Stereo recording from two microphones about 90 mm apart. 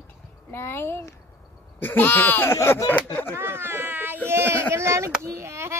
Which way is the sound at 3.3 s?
25° right (ahead or behind).